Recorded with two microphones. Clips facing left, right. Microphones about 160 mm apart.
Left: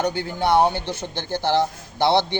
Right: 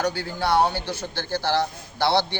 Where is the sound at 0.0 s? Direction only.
20° left (ahead or behind).